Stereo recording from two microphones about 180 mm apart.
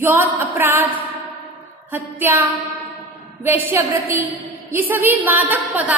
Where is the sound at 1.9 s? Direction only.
10° right (ahead or behind).